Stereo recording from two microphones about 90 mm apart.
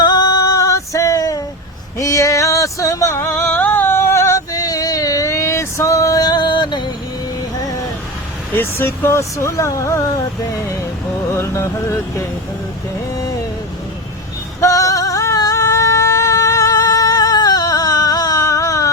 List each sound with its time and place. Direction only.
0.0 s a sound: 50° left (ahead or behind)
8.5 s speech: 25° left (ahead or behind)
11.3 s speech: 30° left (ahead or behind)
14.6 s singing: 40° left (ahead or behind)